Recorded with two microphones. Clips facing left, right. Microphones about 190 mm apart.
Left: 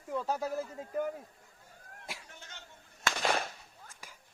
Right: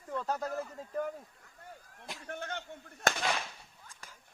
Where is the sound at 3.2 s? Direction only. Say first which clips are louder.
Left 3 dB; 45° left (ahead or behind).